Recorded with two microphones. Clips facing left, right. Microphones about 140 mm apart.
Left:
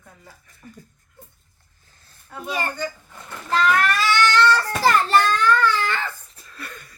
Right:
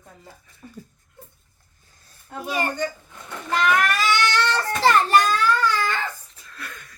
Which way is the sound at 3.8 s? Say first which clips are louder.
Left 2 dB; 15° right (ahead or behind).